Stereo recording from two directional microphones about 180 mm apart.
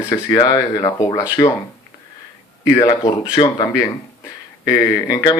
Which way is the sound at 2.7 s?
20° left (ahead or behind).